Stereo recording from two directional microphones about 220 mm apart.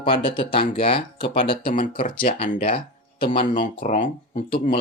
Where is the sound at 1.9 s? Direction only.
25° left (ahead or behind).